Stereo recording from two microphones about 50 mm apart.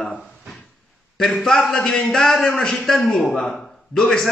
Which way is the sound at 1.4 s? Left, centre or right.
Centre.